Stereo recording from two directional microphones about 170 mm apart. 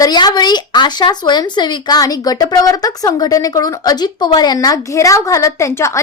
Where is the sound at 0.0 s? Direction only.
25° left (ahead or behind).